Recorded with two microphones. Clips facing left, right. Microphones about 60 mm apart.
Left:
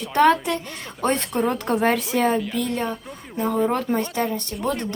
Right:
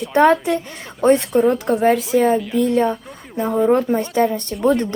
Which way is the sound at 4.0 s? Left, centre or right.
Right.